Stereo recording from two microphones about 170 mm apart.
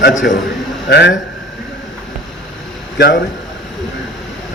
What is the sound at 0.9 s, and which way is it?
Speech, 80° left.